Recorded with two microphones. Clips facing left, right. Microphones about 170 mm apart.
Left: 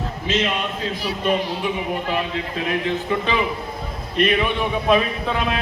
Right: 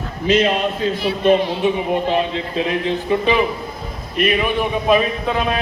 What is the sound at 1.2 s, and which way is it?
A man's voice, 30° right (ahead or behind).